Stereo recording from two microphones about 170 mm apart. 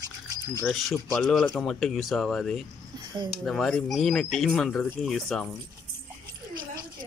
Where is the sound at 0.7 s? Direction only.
Centre (ahead or behind).